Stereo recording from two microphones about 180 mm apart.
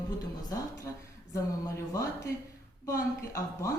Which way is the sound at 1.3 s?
15° left (ahead or behind).